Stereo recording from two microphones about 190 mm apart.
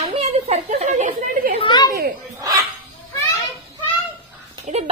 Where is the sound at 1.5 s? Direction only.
25° left (ahead or behind).